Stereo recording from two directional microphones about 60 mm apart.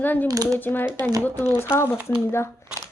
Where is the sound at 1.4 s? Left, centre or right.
Left.